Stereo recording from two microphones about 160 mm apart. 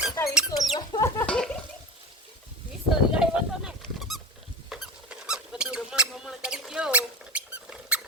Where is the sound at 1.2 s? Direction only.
5° left (ahead or behind).